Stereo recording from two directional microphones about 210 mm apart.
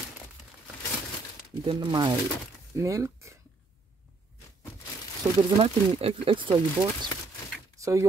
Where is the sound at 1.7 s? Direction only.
20° right (ahead or behind).